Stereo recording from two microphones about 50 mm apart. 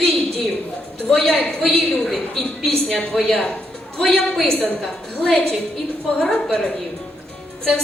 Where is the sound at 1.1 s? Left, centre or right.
Centre.